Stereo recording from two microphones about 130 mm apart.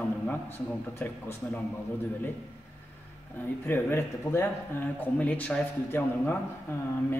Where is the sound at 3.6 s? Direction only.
15° left (ahead or behind).